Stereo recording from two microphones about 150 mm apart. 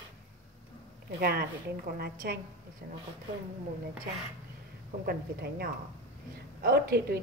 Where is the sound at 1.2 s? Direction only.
90° right.